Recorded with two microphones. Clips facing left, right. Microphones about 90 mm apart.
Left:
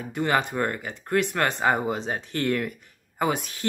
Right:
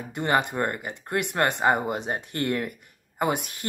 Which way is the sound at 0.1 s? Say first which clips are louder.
Even; 15° right (ahead or behind).